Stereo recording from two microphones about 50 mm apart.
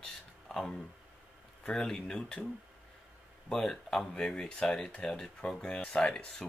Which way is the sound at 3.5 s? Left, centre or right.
Centre.